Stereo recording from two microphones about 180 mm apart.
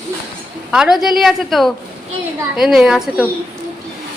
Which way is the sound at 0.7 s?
5° right (ahead or behind).